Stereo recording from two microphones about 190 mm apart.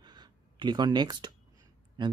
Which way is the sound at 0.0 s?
20° right (ahead or behind).